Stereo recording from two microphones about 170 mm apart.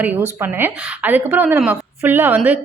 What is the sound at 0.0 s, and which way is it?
A woman's voice, 10° right (ahead or behind).